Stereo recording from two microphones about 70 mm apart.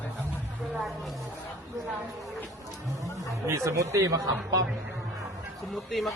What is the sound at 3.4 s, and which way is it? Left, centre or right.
Speech, right.